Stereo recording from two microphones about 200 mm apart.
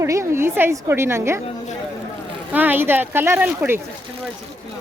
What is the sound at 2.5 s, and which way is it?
Speech, 10° right (ahead or behind).